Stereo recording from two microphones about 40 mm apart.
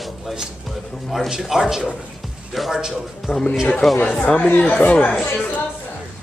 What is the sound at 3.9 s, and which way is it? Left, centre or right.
Speech, left.